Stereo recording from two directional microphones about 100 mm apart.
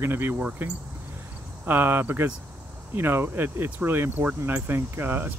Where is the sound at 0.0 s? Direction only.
20° right (ahead or behind).